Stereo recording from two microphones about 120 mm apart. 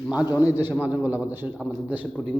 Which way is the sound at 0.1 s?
15° right (ahead or behind).